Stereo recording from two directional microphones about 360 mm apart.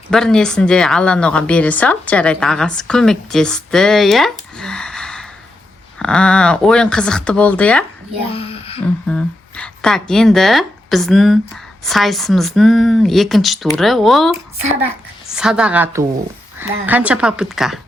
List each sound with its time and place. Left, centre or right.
0.1 s a woman's voice: centre
8.3 s a sound: centre
9.0 s a woman's voice: centre
15.4 s a woman's voice: centre